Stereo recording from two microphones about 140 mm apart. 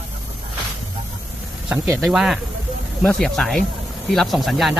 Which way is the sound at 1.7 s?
5° right (ahead or behind).